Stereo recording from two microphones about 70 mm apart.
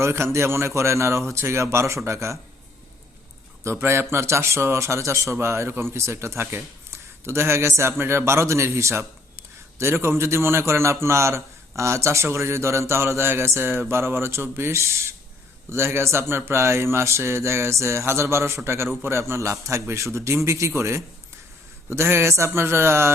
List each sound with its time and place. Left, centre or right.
0.0 s speech: right
3.6 s a man's voice: right